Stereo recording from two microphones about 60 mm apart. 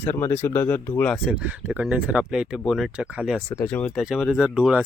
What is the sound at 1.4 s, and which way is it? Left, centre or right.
Speech, right.